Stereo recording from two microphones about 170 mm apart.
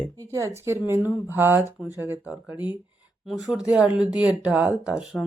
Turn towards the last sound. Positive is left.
turn(degrees=-5)  # may be behind; listen again after turning